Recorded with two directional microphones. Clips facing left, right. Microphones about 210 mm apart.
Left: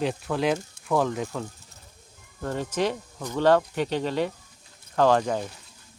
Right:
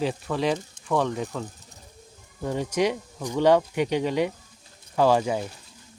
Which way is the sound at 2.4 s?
10° right (ahead or behind).